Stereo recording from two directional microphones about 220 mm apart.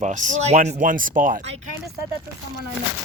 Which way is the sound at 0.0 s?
35° right (ahead or behind).